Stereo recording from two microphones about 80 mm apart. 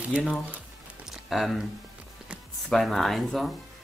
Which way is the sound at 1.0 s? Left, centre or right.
Centre.